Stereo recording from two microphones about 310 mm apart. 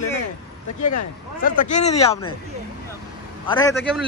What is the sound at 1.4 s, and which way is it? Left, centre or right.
Speech, left.